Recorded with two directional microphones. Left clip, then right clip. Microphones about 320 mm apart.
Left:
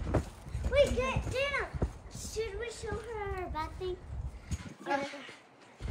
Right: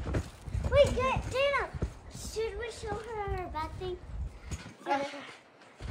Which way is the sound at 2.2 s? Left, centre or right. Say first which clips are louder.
Right 2 dB; centre.